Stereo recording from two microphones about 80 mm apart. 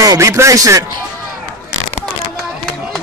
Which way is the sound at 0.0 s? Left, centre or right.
Right.